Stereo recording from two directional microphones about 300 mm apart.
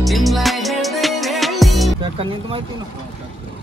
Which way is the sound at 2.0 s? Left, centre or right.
Centre.